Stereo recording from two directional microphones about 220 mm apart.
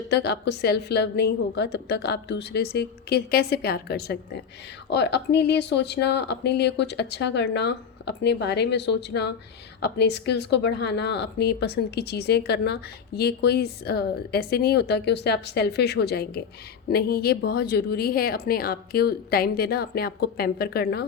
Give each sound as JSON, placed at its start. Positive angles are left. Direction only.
{"t": 0.1, "sound": "speech", "side_deg": 50}